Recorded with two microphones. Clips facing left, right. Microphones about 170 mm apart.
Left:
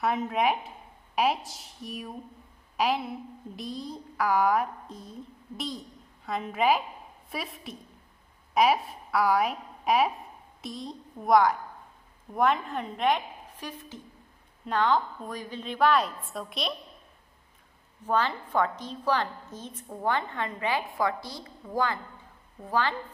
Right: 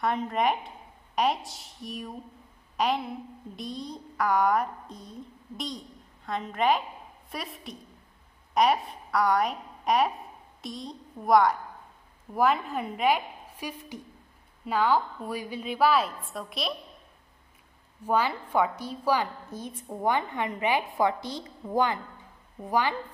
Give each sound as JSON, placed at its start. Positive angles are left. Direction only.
{"t": 0.0, "sound": "a woman's voice", "side_deg": 5}
{"t": 18.0, "sound": "a woman's voice", "side_deg": -10}